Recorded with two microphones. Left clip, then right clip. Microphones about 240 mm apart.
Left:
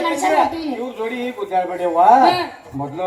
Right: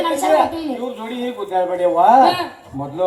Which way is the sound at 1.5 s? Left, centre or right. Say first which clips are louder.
Right 2 dB; right.